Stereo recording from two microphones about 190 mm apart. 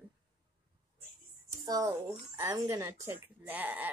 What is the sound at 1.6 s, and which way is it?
A woman's voice, 20° right (ahead or behind).